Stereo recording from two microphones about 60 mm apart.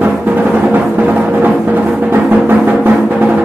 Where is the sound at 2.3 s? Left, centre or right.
Right.